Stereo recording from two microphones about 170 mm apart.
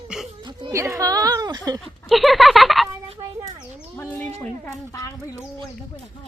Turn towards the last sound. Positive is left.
turn(degrees=20)  # may be behind; listen again after turning